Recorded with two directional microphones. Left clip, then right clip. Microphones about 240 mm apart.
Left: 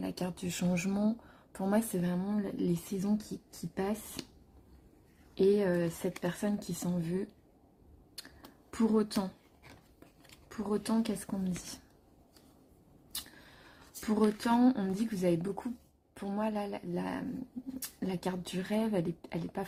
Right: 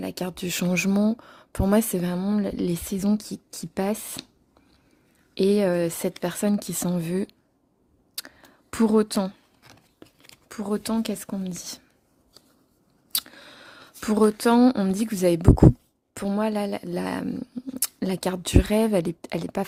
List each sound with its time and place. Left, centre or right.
0.0 s speech: right
4.2 s speech: right
5.3 s speech: right
8.7 s speech: right
10.5 s speech: right
13.1 s speech: right